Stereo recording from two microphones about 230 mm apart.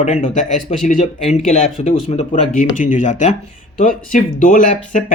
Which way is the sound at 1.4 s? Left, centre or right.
Left.